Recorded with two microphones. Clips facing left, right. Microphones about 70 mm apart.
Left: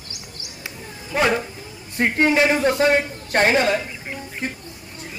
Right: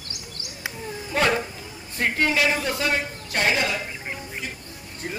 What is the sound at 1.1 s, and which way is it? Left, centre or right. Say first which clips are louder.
Speech: left 2 dB; centre.